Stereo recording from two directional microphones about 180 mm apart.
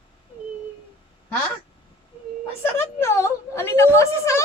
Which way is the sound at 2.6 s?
15° left (ahead or behind).